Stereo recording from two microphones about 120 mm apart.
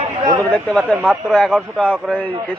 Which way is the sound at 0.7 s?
5° left (ahead or behind).